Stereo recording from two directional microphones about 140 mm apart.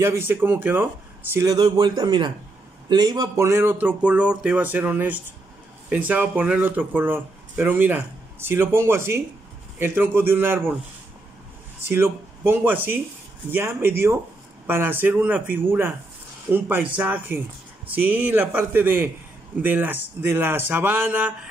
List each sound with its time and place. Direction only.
0.0 s speech: 15° right (ahead or behind)
1.3 s a man's voice: 25° right (ahead or behind)
11.8 s speech: 15° right (ahead or behind)